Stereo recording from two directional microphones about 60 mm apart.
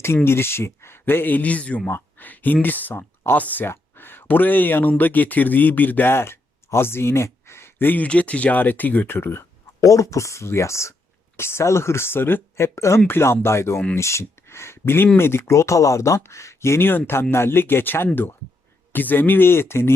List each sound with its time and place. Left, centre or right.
0.3 s speech: left
8.0 s speech: left
9.8 s speech: left
13.1 s speech: left